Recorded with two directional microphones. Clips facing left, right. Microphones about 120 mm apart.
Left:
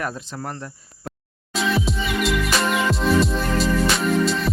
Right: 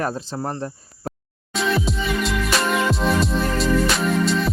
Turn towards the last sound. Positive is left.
turn(degrees=0)  # may be behind; listen again after turning